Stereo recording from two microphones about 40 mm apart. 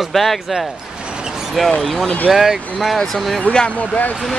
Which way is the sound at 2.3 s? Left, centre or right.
Centre.